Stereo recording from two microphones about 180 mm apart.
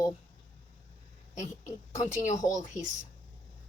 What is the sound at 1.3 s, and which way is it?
A woman's voice, 40° left (ahead or behind).